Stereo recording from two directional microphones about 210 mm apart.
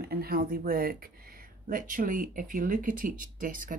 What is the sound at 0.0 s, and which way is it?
Speech, 45° right (ahead or behind).